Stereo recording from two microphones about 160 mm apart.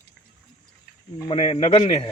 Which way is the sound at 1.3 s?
45° left (ahead or behind).